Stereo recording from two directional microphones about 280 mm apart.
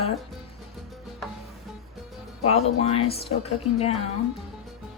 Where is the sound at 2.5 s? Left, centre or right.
Left.